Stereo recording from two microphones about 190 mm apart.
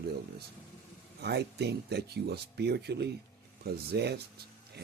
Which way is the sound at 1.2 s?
60° right (ahead or behind).